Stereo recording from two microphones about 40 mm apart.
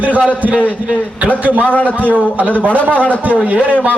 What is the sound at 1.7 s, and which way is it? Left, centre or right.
Speech, left.